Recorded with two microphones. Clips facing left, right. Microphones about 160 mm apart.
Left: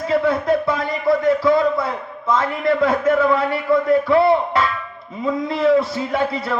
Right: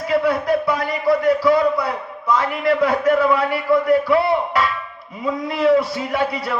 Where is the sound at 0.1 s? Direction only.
25° left (ahead or behind).